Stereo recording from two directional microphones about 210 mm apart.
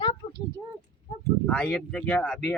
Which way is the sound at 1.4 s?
5° left (ahead or behind).